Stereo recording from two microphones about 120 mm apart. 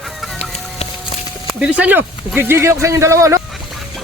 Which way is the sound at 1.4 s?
10° right (ahead or behind).